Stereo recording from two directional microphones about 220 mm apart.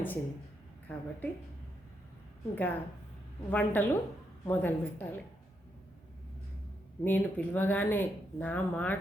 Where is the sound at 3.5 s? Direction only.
5° left (ahead or behind).